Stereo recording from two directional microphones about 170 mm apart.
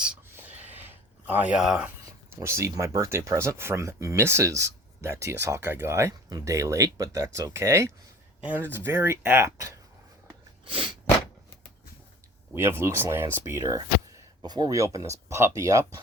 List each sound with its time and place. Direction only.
0.0 s snort: 10° right (ahead or behind)
0.9 s a sound: 10° right (ahead or behind)
2.3 s speech: 15° right (ahead or behind)
10.7 s sneeze: 30° right (ahead or behind)
12.5 s speech: 15° right (ahead or behind)